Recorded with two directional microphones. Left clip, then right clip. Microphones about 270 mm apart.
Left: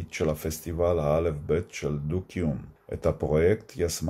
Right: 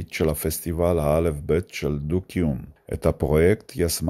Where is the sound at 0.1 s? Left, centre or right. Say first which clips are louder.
Right 4 dB; right.